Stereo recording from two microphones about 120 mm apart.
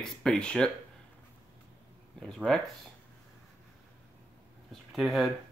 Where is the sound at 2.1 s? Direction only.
5° left (ahead or behind).